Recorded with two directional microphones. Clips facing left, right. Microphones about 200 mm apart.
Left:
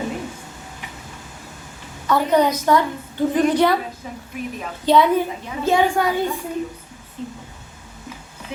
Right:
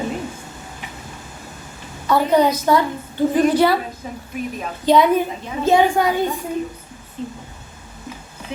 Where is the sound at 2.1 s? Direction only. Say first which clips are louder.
Right 1 dB; 10° right (ahead or behind).